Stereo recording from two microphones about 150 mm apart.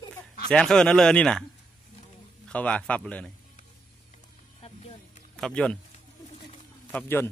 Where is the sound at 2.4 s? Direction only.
10° left (ahead or behind).